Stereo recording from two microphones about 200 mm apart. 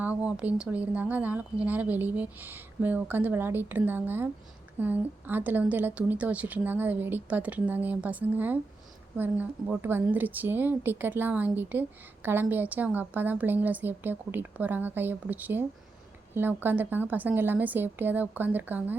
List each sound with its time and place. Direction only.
0.0 s a woman's voice: 5° right (ahead or behind)